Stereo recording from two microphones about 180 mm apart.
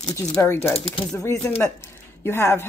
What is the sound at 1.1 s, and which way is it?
Speech, 15° left (ahead or behind).